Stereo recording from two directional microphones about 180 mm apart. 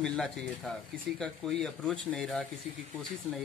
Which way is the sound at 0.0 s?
5° left (ahead or behind).